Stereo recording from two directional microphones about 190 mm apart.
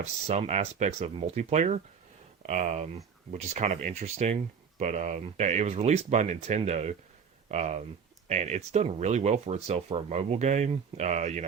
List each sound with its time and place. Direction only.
0.0 s speech: 35° right (ahead or behind)